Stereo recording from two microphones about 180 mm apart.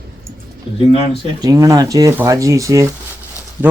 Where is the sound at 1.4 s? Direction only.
20° right (ahead or behind).